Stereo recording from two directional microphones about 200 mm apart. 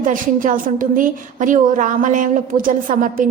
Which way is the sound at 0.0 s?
40° right (ahead or behind).